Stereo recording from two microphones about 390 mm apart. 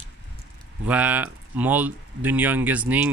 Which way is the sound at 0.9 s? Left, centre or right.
Centre.